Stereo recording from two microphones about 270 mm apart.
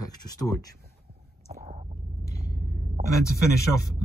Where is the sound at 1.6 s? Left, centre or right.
Right.